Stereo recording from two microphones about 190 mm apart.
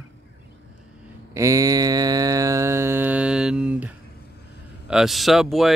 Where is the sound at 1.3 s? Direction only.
15° right (ahead or behind).